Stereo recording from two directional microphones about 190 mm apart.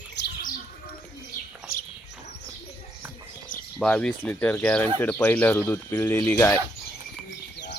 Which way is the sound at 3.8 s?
5° left (ahead or behind).